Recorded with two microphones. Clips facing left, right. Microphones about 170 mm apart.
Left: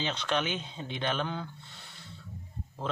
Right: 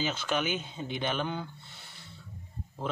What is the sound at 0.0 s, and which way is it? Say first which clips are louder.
Speech: even; 5° right (ahead or behind).